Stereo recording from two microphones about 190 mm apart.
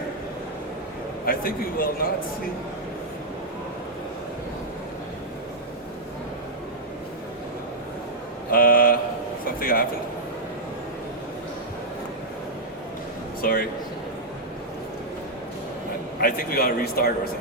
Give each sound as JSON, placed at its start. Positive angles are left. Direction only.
{"t": 1.2, "sound": "speech", "side_deg": 50}
{"t": 8.4, "sound": "a sound", "side_deg": 50}
{"t": 9.6, "sound": "speech", "side_deg": 50}
{"t": 13.4, "sound": "speech", "side_deg": 50}
{"t": 16.2, "sound": "speech", "side_deg": 55}